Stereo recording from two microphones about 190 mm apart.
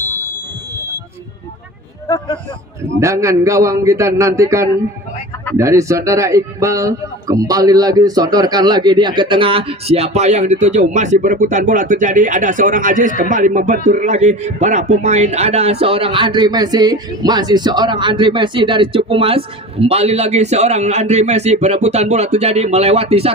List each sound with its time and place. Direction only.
2.0 s speech: 20° left (ahead or behind)
3.0 s a man's voice: 15° right (ahead or behind); by 23.3 s 30° right (ahead or behind)